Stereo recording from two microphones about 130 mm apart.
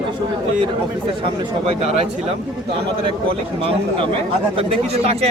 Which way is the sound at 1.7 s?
50° right (ahead or behind).